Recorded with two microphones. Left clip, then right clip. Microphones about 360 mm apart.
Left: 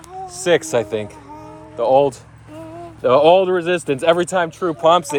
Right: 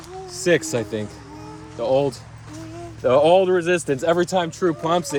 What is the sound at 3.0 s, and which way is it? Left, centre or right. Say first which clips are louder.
Speech: left 3 dB; centre.